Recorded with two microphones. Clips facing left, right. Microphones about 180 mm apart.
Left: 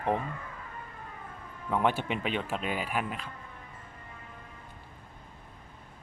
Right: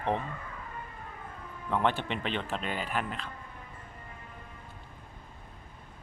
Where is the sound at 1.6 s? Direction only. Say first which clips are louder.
Left 1 dB; 5° left (ahead or behind).